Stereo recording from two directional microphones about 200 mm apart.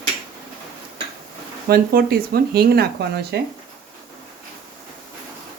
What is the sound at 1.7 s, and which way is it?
Speech, 50° right (ahead or behind).